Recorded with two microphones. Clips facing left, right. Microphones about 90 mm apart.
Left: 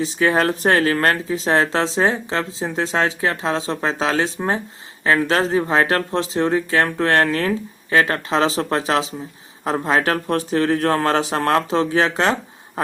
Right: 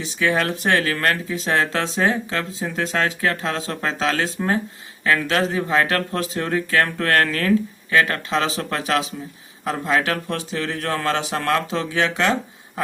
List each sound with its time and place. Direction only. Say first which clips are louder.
0.0 s speech: left 3 dB; 35° left (ahead or behind)